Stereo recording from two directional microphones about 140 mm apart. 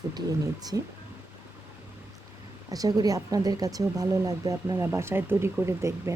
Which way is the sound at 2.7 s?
25° right (ahead or behind).